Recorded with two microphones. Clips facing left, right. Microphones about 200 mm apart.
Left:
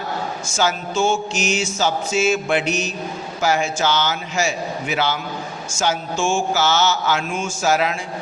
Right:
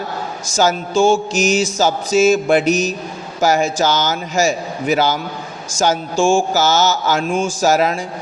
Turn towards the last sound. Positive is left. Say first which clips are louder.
# right 4 dB
turn(degrees=-40)  # may be behind; listen again after turning